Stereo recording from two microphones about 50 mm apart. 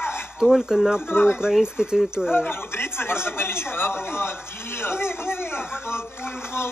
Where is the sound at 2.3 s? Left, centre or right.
Left.